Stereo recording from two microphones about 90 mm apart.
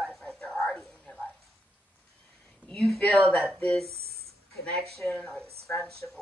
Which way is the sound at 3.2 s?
30° right (ahead or behind).